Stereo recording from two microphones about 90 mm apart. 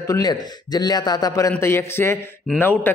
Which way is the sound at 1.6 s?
30° left (ahead or behind).